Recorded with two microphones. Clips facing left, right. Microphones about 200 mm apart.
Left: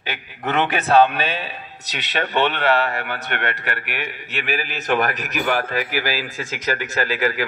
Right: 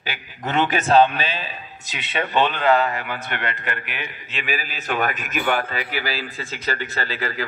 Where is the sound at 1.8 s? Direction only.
75° left (ahead or behind).